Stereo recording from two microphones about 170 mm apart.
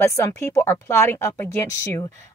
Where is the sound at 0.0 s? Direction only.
15° left (ahead or behind).